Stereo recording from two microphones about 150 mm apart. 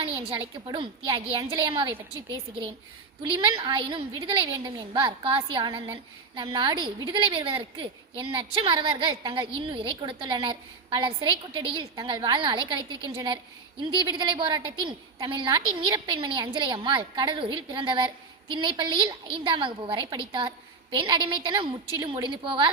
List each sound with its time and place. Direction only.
0.0 s a woman's voice: 35° right (ahead or behind)
3.2 s a woman's voice: 35° right (ahead or behind)